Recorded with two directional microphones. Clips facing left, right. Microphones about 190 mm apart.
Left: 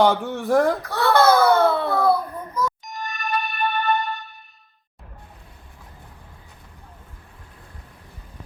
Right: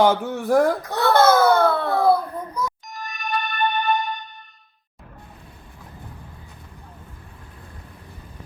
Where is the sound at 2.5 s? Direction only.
15° right (ahead or behind).